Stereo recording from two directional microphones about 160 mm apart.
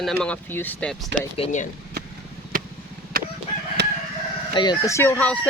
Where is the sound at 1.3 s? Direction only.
35° left (ahead or behind).